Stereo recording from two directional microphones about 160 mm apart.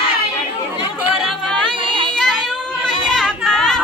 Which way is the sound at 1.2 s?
Centre (ahead or behind).